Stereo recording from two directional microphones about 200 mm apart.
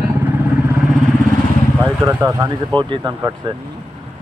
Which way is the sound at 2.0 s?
15° right (ahead or behind).